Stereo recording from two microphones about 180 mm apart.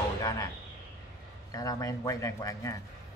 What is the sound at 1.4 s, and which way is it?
A man's voice, 20° left (ahead or behind).